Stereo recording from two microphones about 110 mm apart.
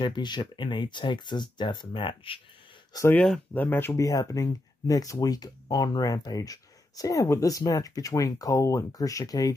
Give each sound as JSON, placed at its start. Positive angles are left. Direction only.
{"t": 0.0, "sound": "speech", "side_deg": 45}
{"t": 3.5, "sound": "speech", "side_deg": 15}